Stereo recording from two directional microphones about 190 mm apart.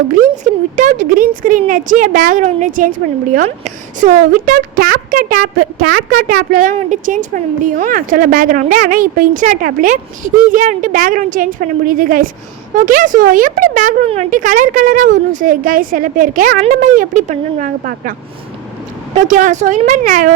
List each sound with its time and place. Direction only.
0.1 s speech: 40° right (ahead or behind)
19.1 s speech: 40° right (ahead or behind)